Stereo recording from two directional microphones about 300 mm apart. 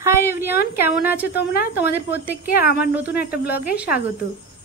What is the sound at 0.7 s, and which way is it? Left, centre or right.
Speech, centre.